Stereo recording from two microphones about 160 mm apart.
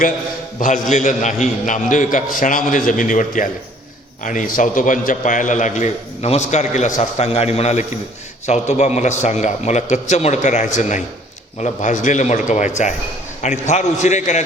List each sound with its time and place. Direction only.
0.6 s a man's voice: 50° left (ahead or behind)